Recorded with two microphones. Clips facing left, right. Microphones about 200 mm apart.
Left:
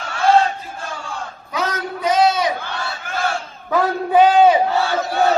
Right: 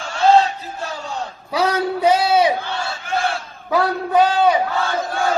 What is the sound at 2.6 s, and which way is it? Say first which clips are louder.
Battle cry: right 2 dB; 50° left (ahead or behind).